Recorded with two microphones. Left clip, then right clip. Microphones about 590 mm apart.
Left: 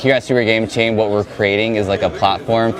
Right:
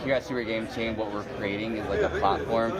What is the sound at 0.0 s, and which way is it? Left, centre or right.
Speech, left.